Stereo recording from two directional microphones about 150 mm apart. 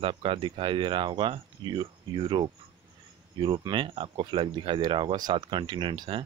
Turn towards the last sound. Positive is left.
turn(degrees=-35)  # may be behind; listen again after turning